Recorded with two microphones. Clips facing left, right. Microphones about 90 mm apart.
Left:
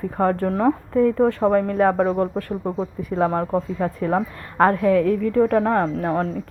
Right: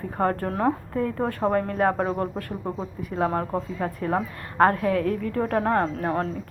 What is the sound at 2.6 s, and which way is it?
Speech, 10° left (ahead or behind).